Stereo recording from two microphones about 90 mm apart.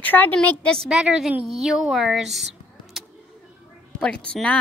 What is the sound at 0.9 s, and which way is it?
Speech, 5° right (ahead or behind).